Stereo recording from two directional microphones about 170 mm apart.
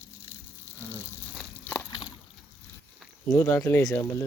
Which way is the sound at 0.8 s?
15° right (ahead or behind).